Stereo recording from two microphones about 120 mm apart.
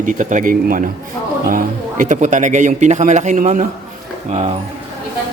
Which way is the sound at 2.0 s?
90° right.